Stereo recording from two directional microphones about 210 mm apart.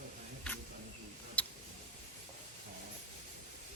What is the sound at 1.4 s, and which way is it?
Tick, 5° left (ahead or behind).